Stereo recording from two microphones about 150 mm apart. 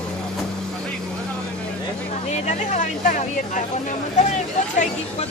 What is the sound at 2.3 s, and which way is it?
Speech, 50° left (ahead or behind).